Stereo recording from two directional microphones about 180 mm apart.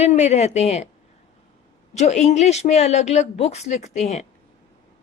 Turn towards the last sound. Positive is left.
turn(degrees=40)  # may be behind; listen again after turning